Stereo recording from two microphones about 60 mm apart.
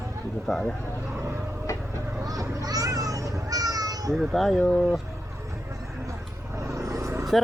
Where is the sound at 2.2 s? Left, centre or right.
Right.